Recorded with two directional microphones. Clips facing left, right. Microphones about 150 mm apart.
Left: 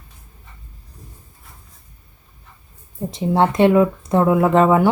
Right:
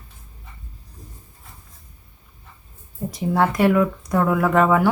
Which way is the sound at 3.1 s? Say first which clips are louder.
Left 3 dB; 25° left (ahead or behind).